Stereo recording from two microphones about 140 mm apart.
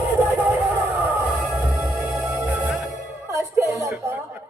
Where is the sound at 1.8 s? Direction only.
15° right (ahead or behind).